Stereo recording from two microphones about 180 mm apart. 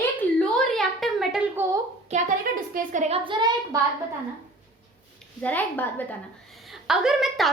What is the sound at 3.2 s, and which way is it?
Speech, 25° right (ahead or behind).